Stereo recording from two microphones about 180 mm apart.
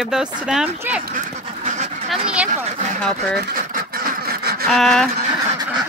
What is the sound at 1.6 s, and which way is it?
Duck, 45° right (ahead or behind).